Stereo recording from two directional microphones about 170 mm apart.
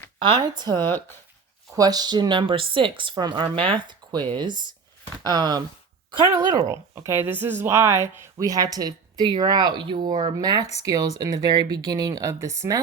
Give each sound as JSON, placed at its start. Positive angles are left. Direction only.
{"t": 0.2, "sound": "speech", "side_deg": -25}